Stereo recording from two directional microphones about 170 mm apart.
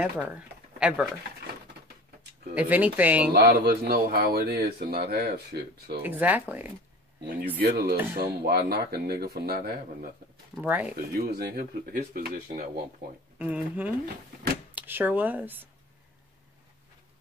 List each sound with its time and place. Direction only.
0.7 s speech: 5° right (ahead or behind)
2.5 s speech: 10° right (ahead or behind)
3.3 s speech: 70° right (ahead or behind)
6.0 s speech: 10° right (ahead or behind)
7.6 s speech: 65° right (ahead or behind)
10.6 s speech: 10° right (ahead or behind)
11.1 s speech: 65° right (ahead or behind)
13.4 s speech: 10° right (ahead or behind)
14.0 s speech: 60° right (ahead or behind)
14.8 s speech: 10° right (ahead or behind)